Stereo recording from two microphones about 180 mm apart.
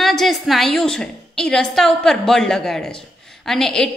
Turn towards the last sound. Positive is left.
turn(degrees=5)  # may be behind; listen again after turning